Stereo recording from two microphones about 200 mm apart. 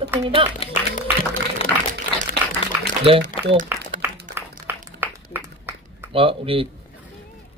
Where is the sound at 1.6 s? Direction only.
30° left (ahead or behind).